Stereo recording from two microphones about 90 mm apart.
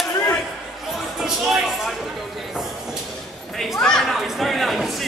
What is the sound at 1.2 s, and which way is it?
Music, 5° right (ahead or behind).